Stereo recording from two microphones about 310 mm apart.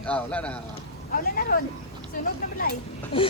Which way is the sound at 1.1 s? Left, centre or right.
Left.